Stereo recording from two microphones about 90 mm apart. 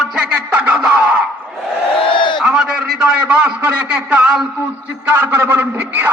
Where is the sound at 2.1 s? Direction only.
65° left (ahead or behind).